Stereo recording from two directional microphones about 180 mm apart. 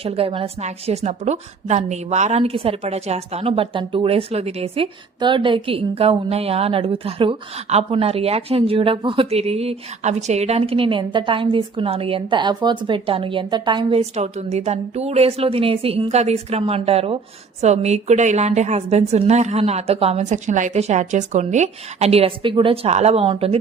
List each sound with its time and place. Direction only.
0.0 s a woman's voice: 30° right (ahead or behind)